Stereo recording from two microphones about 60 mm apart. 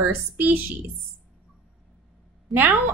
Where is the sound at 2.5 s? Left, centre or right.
Right.